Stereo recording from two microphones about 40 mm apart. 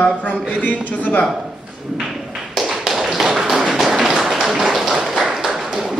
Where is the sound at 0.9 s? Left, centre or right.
Left.